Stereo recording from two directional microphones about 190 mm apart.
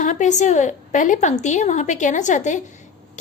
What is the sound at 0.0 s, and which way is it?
A woman's voice, 40° left (ahead or behind).